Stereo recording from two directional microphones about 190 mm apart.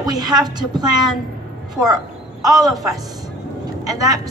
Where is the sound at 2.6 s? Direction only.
20° right (ahead or behind).